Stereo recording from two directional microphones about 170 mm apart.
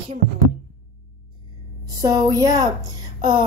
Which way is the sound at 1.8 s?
25° right (ahead or behind).